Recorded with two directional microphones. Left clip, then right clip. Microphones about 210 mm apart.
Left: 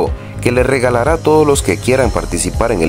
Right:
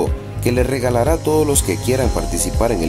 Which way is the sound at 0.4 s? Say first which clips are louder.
Left 6 dB; 15° left (ahead or behind).